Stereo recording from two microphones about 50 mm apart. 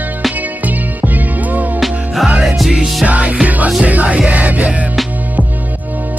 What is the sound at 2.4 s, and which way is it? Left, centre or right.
Music, centre.